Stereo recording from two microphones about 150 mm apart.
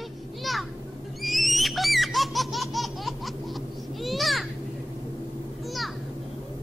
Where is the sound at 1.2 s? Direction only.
Centre (ahead or behind).